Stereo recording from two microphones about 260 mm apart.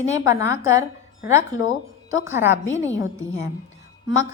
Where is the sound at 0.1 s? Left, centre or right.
Centre.